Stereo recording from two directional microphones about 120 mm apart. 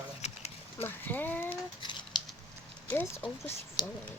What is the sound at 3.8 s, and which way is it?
Speech, 40° left (ahead or behind).